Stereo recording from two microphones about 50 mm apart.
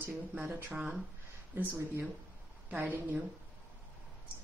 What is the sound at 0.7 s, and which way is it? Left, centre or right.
Speech, right.